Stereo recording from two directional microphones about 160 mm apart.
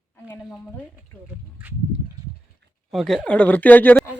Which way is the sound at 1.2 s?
10° right (ahead or behind).